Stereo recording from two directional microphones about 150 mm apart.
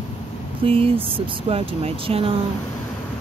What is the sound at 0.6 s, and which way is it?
Speech, 40° right (ahead or behind).